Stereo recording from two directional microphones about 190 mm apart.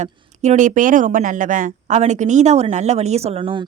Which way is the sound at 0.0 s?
40° right (ahead or behind).